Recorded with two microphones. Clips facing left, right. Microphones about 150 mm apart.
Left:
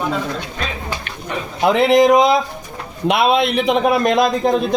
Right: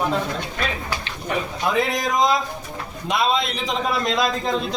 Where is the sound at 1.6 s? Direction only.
70° left (ahead or behind).